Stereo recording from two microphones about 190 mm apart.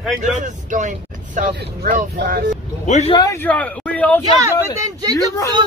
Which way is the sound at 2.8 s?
35° left (ahead or behind).